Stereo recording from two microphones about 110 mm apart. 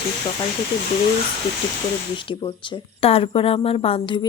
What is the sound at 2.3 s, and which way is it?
Speech, 55° left (ahead or behind).